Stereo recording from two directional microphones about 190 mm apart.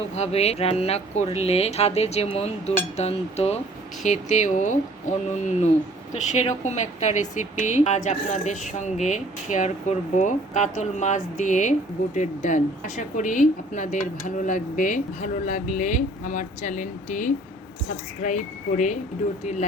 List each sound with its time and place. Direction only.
0.2 s speech: 35° left (ahead or behind)